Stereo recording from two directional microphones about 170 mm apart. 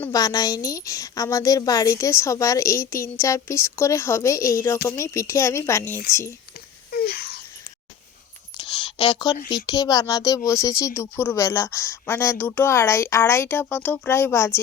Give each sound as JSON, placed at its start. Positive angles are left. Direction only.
{"t": 0.0, "sound": "speech", "side_deg": 20}
{"t": 6.9, "sound": "wail", "side_deg": 65}
{"t": 8.5, "sound": "a sound", "side_deg": 30}
{"t": 9.5, "sound": "speech", "side_deg": 20}